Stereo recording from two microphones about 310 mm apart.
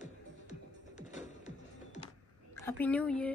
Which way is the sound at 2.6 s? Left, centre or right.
Centre.